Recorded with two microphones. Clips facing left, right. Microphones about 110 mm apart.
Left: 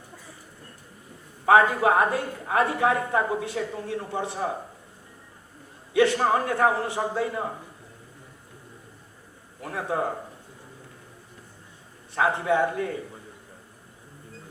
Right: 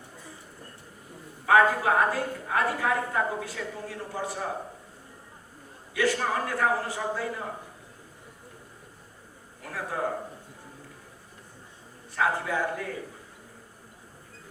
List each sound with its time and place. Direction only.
1.5 s a woman's voice: 25° left (ahead or behind)
5.9 s a woman's voice: 25° left (ahead or behind)
9.6 s a woman's voice: 25° left (ahead or behind)
12.1 s a woman's voice: 25° left (ahead or behind)